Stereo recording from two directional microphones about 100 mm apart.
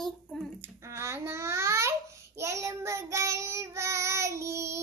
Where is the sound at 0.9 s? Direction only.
25° right (ahead or behind).